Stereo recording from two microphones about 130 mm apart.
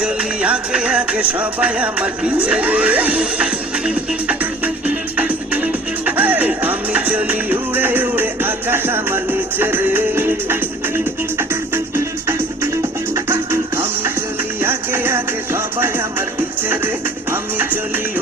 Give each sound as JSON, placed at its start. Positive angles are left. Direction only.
{"t": 0.0, "sound": "music", "side_deg": -10}